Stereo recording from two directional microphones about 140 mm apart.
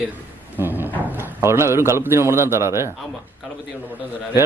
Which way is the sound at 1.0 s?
15° right (ahead or behind).